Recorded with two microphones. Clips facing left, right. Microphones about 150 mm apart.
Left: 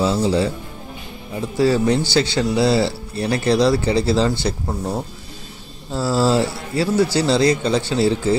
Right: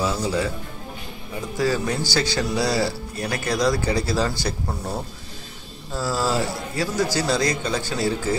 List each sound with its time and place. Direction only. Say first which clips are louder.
0.0 s speech: left 5 dB; 25° left (ahead or behind)
1.6 s speech: left 7 dB; 25° left (ahead or behind)